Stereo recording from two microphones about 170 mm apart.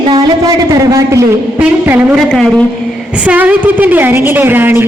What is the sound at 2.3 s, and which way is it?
Speech, 5° left (ahead or behind).